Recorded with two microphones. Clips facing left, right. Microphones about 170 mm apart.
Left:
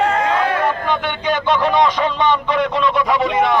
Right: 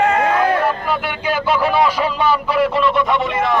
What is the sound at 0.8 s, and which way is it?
A man's voice, 5° right (ahead or behind).